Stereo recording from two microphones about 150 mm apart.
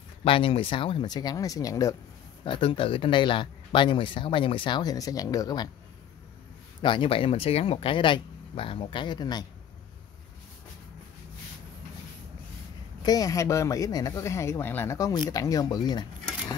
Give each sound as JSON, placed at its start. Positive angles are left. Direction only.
{"t": 0.2, "sound": "speech", "side_deg": 35}
{"t": 2.4, "sound": "speech", "side_deg": 35}
{"t": 6.8, "sound": "speech", "side_deg": 35}
{"t": 13.0, "sound": "speech", "side_deg": 25}